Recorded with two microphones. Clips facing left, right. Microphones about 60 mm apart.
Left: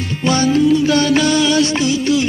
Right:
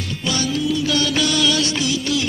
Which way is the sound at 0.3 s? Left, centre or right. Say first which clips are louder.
Left 9 dB; left.